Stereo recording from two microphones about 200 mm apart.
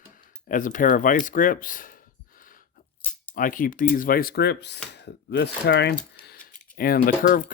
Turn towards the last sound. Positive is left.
turn(degrees=45)  # may be behind; listen again after turning